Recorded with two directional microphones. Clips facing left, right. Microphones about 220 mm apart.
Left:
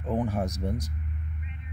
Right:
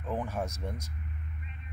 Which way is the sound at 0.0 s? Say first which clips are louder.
Left 6 dB; 20° left (ahead or behind).